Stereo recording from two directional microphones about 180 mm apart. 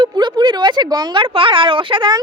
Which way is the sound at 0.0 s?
25° right (ahead or behind).